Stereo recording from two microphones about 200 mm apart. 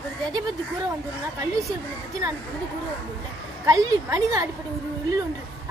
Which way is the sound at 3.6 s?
15° right (ahead or behind).